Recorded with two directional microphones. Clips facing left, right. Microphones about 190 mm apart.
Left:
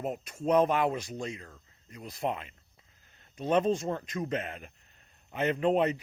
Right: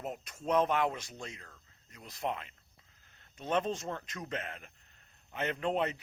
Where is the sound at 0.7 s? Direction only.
10° left (ahead or behind).